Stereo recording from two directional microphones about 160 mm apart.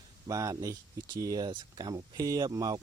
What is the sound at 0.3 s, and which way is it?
Speech, 20° right (ahead or behind).